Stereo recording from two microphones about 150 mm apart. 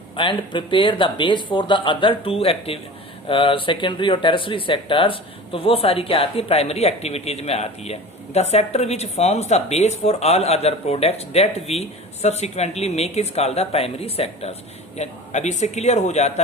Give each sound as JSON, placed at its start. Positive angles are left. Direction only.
{"t": 0.2, "sound": "speech", "side_deg": 35}